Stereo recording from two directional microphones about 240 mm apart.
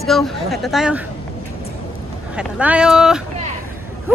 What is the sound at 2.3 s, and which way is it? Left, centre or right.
Speech, centre.